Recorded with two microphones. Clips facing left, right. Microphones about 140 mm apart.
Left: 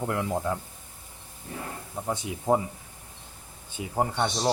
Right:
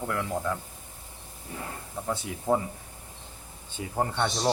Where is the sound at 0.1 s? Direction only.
25° left (ahead or behind).